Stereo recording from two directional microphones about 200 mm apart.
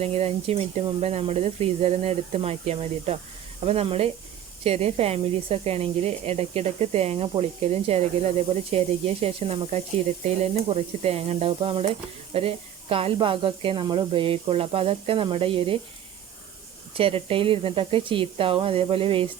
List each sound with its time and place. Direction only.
0.0 s speech: 30° right (ahead or behind)
17.0 s speech: 30° right (ahead or behind)